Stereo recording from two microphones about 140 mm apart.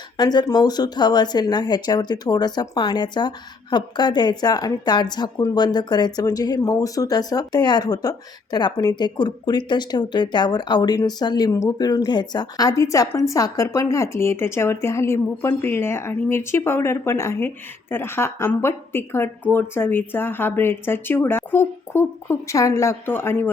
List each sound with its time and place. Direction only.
0.2 s speech: 30° left (ahead or behind)